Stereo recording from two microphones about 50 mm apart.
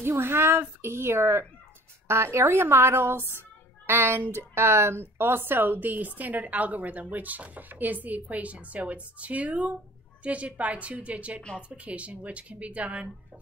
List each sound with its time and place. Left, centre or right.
0.0 s a woman's voice: right